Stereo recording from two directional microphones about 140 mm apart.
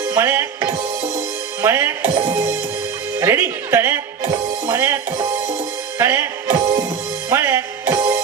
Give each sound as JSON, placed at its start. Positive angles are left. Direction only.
{"t": 0.1, "sound": "music", "side_deg": -20}
{"t": 1.6, "sound": "speech", "side_deg": -20}
{"t": 4.6, "sound": "music", "side_deg": -20}